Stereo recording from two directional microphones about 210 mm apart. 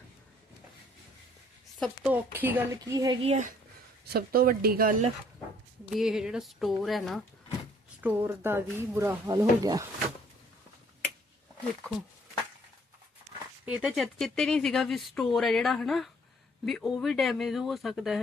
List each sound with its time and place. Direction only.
1.8 s speech: 5° right (ahead or behind)
3.2 s speech: 35° right (ahead or behind)
4.0 s speech: 45° right (ahead or behind)
5.9 s speech: centre (ahead or behind)
8.0 s speech: 10° right (ahead or behind)
13.7 s speech: 5° right (ahead or behind)